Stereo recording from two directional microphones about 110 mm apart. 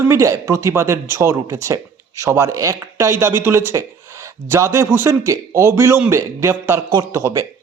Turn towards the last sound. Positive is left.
turn(degrees=-30)  # may be behind; listen again after turning